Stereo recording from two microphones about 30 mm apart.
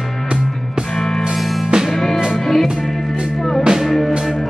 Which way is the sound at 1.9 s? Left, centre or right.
Centre.